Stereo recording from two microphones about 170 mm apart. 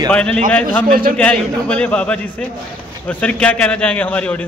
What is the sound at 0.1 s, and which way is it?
Speech, 10° left (ahead or behind).